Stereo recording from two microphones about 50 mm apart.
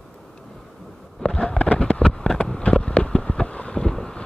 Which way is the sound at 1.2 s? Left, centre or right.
Centre.